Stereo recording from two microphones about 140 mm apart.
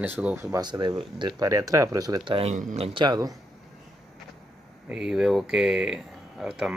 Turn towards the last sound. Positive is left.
turn(degrees=-5)  # may be behind; listen again after turning